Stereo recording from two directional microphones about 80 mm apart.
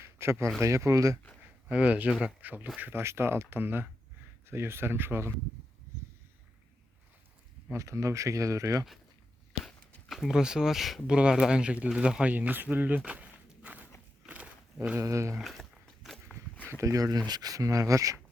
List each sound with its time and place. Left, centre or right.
0.0 s a sound: right
0.6 s speech: right
1.7 s speech: centre
7.7 s speech: right
10.1 s speech: centre; by 13.0 s right
13.1 s walk: centre
14.9 s speech: right
15.4 s a sound: centre
16.6 s speech: right